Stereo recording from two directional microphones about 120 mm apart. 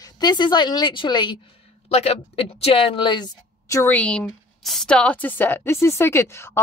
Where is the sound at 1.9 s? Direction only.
60° left (ahead or behind); by 3.3 s 40° left (ahead or behind).